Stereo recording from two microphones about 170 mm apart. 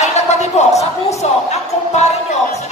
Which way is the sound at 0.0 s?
40° left (ahead or behind).